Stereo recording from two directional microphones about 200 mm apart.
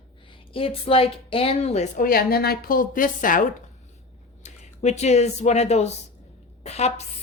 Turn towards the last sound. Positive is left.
turn(degrees=35)  # may be behind; listen again after turning